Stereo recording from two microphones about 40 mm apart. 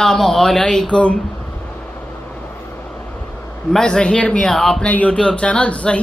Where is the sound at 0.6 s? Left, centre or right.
Left.